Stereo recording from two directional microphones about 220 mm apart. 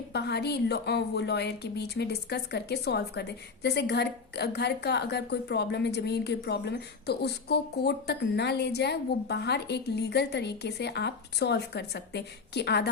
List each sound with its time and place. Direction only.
0.1 s a woman's voice: 50° left (ahead or behind)